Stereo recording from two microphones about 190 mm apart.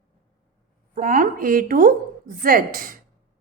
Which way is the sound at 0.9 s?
45° right (ahead or behind).